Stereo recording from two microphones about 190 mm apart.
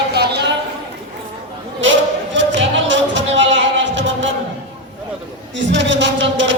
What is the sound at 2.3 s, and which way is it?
Music, 70° right (ahead or behind).